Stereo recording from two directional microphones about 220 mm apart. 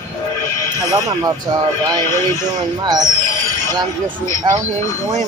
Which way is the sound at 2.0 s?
15° left (ahead or behind).